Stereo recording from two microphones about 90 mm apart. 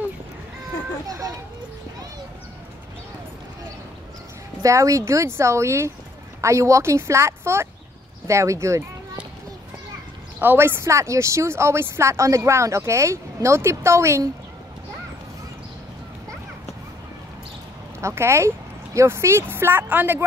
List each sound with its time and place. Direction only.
1.0 s speech: 45° right (ahead or behind)
4.6 s a child's voice: 35° right (ahead or behind)
10.4 s speech: 25° right (ahead or behind)
18.0 s speech: 30° right (ahead or behind)